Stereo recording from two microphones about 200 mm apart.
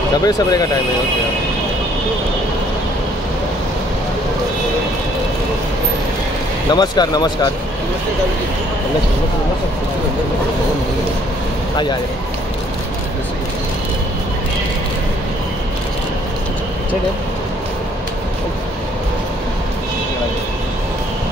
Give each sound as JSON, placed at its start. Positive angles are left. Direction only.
{"t": 0.2, "sound": "speech", "side_deg": 20}
{"t": 6.7, "sound": "speech", "side_deg": 20}